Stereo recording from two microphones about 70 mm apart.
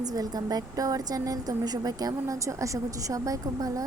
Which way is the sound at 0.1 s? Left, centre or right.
Right.